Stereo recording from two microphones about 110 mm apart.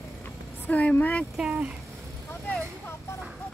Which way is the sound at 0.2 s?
15° left (ahead or behind).